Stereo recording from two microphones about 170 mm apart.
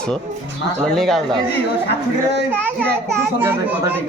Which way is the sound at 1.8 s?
75° left (ahead or behind).